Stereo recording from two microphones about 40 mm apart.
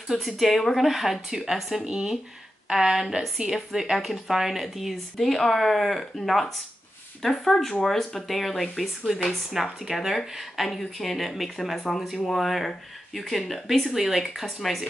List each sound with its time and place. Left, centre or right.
0.1 s speech: centre
1.9 s speech: right
2.7 s a woman's voice: centre